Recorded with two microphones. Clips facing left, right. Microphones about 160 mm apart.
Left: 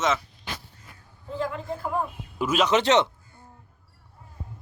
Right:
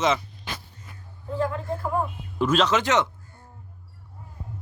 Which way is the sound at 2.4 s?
10° left (ahead or behind).